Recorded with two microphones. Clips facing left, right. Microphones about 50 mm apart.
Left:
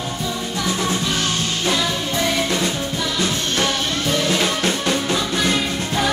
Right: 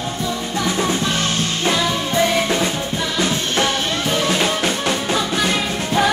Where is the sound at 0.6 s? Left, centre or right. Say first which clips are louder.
Right 3 dB; right.